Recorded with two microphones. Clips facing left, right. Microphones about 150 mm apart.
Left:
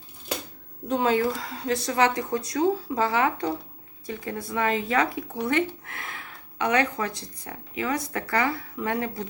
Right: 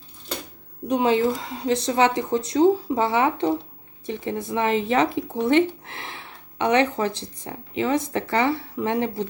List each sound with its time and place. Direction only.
0.9 s speech: 15° right (ahead or behind)